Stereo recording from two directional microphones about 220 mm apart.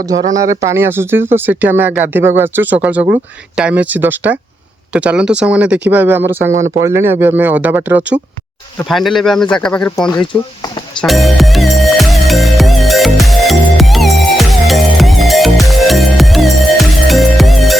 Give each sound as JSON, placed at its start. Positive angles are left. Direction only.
{"t": 0.0, "sound": "speech", "side_deg": -15}
{"t": 10.1, "sound": "speech", "side_deg": 20}
{"t": 11.0, "sound": "music", "side_deg": 0}